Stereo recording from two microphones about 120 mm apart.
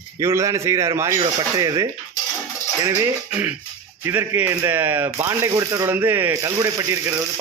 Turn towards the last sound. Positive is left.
turn(degrees=-25)  # may be behind; listen again after turning